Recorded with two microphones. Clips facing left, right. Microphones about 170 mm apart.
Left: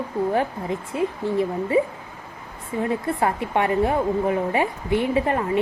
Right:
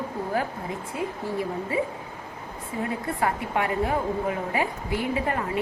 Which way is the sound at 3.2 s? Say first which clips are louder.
Left 2 dB; 25° left (ahead or behind).